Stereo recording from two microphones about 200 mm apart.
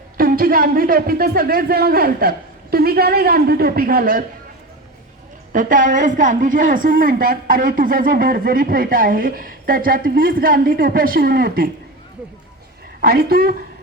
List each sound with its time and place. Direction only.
0.2 s a woman's voice: 45° right (ahead or behind)
5.5 s a woman's voice: 40° right (ahead or behind)
13.0 s a woman's voice: 50° right (ahead or behind)